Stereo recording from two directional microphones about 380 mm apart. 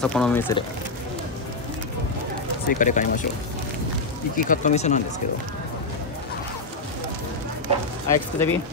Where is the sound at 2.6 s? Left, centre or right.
Centre.